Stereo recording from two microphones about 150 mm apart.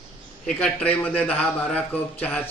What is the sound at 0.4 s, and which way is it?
Speech, 10° left (ahead or behind).